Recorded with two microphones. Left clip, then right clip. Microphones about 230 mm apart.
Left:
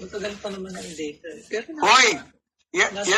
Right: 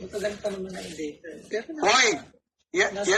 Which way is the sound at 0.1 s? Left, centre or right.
Left.